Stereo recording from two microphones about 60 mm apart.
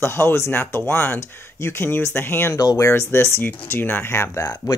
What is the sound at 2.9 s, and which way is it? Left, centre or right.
Speech, left.